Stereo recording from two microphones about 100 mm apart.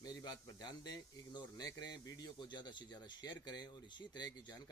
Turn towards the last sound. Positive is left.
turn(degrees=45)  # may be behind; listen again after turning